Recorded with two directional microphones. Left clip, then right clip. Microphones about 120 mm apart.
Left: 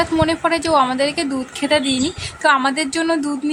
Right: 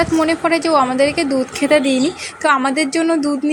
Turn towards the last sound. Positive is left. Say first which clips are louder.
# right 2 dB
turn(degrees=-5)  # may be behind; listen again after turning